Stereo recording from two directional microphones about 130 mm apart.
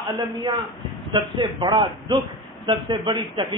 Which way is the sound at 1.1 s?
40° right (ahead or behind).